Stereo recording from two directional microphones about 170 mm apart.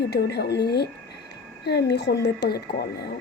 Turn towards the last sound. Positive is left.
turn(degrees=70)  # may be behind; listen again after turning